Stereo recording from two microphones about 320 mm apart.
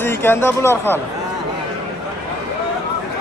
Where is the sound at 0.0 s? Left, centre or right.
Centre.